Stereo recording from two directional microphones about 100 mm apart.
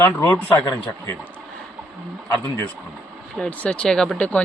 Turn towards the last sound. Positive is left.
turn(degrees=15)  # may be behind; listen again after turning